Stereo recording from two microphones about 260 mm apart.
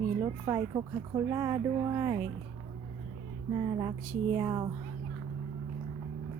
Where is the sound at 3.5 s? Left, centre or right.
Centre.